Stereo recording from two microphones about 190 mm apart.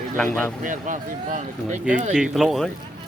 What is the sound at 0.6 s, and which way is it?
Speech, 40° right (ahead or behind).